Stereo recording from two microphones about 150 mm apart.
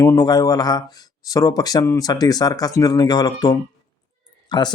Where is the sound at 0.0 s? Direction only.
20° left (ahead or behind).